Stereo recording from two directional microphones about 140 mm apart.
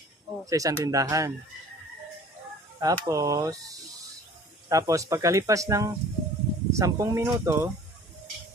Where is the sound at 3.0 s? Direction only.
25° right (ahead or behind).